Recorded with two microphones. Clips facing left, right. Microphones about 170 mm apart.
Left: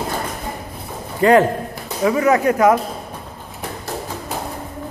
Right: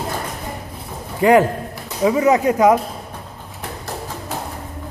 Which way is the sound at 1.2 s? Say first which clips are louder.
Even; 15° right (ahead or behind).